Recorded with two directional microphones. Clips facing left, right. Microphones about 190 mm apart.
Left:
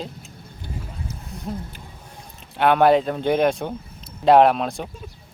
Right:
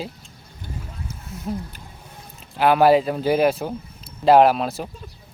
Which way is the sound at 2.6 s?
5° right (ahead or behind).